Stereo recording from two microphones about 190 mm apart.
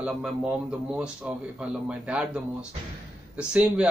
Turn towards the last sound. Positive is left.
turn(degrees=-5)  # may be behind; listen again after turning